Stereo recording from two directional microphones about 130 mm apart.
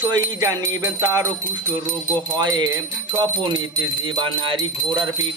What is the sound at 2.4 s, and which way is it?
Speech, 35° right (ahead or behind).